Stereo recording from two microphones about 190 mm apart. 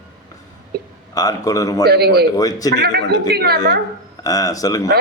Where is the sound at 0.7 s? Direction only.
55° right (ahead or behind).